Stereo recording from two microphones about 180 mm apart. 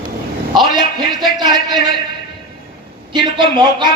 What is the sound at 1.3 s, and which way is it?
Speech, 25° right (ahead or behind).